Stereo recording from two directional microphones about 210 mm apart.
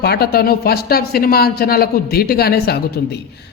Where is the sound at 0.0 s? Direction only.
50° left (ahead or behind).